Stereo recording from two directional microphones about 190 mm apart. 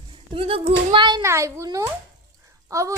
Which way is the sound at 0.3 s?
30° right (ahead or behind).